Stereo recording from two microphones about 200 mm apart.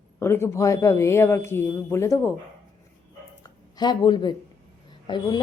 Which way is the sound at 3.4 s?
20° left (ahead or behind).